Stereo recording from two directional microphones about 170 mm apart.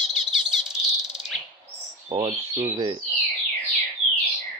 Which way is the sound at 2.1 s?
35° right (ahead or behind).